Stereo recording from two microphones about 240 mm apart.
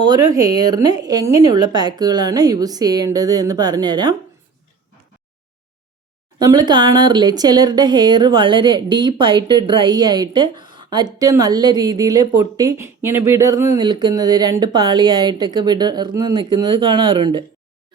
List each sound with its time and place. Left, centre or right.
0.0 s speech: centre
6.4 s speech: centre